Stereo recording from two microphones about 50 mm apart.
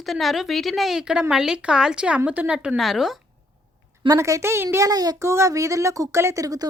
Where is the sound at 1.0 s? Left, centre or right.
Centre.